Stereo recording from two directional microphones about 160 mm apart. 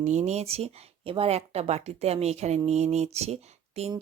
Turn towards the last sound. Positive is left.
turn(degrees=-40)  # may be behind; listen again after turning